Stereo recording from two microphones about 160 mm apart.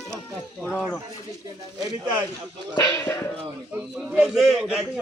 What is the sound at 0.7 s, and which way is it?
Speech, 5° left (ahead or behind).